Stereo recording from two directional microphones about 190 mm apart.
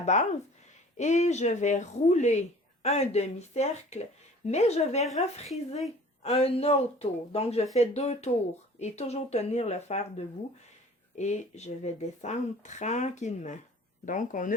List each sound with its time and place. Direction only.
0.0 s speech: 40° left (ahead or behind)